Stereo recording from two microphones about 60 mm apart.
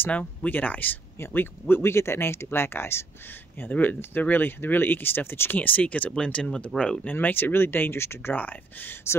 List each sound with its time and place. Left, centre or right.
0.1 s speech: left
3.6 s speech: left
7.1 s speech: left